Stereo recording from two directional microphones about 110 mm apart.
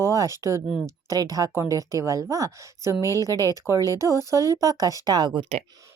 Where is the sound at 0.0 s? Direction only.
30° right (ahead or behind).